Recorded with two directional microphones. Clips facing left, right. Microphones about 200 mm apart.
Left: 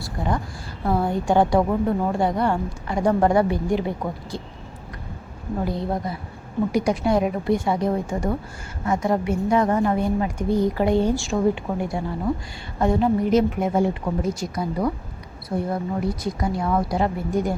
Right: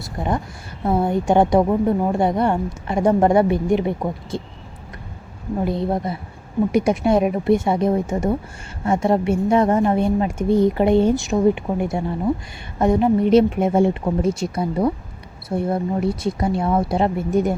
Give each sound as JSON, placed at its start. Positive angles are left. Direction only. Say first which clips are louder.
{"t": 0.0, "sound": "a sound", "louder": "right 2 dB", "side_deg": -20}
{"t": 0.9, "sound": "a woman's voice", "louder": "right 3 dB", "side_deg": -25}
{"t": 5.6, "sound": "a woman's voice", "louder": "right 5 dB", "side_deg": -20}